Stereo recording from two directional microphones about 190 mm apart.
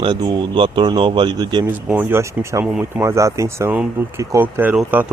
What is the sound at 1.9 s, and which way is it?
Speech, 10° right (ahead or behind).